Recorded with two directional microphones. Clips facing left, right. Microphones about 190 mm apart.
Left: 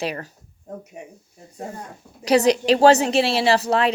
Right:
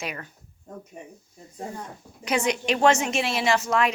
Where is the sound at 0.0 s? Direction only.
35° left (ahead or behind).